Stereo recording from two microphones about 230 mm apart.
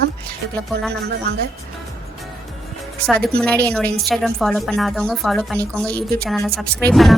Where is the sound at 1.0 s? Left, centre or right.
Right.